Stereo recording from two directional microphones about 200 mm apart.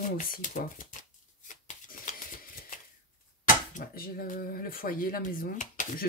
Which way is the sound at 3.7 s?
45° left (ahead or behind).